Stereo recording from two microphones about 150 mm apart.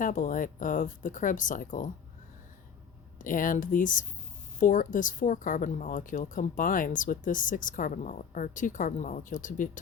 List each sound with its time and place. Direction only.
0.0 s a woman's voice: 60° left (ahead or behind)
3.2 s a woman's voice: 60° left (ahead or behind)